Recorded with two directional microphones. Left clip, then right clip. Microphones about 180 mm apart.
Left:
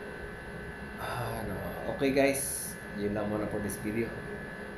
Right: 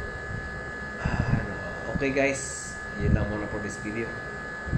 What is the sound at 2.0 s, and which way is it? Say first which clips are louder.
Speech: right 1 dB; 10° left (ahead or behind).